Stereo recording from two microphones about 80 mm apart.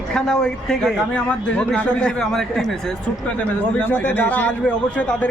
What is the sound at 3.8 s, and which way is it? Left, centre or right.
A man's voice, left.